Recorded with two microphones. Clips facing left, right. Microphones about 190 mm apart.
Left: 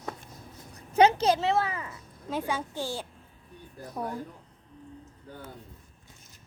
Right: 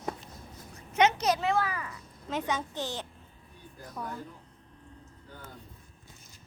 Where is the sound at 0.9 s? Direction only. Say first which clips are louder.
Left 4 dB; 30° left (ahead or behind).